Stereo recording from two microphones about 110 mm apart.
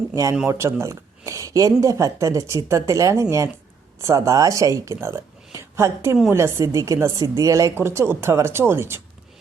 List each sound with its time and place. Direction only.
0.1 s a woman's voice: 30° right (ahead or behind)